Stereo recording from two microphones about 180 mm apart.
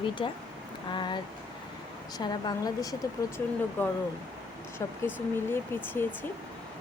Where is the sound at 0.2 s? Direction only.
30° left (ahead or behind).